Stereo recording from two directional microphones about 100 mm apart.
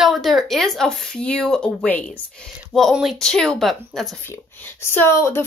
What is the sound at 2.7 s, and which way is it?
Speech, centre (ahead or behind).